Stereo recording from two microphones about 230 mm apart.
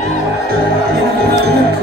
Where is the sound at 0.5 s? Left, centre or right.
Right.